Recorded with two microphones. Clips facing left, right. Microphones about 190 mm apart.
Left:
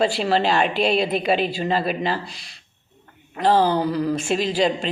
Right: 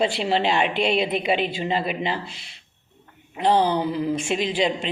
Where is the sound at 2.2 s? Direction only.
40° left (ahead or behind).